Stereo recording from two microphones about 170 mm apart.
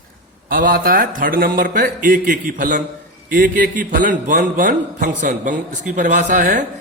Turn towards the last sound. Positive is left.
turn(degrees=-50)  # may be behind; listen again after turning